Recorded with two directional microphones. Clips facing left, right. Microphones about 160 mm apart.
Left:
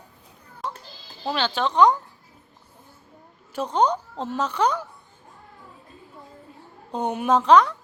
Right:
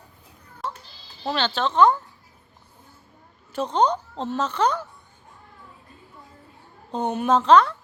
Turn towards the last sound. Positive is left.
turn(degrees=10)  # may be behind; listen again after turning